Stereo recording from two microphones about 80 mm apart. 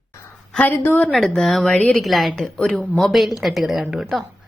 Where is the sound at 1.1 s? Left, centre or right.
Centre.